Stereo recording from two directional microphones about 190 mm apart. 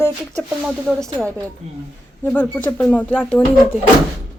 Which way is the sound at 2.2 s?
10° left (ahead or behind).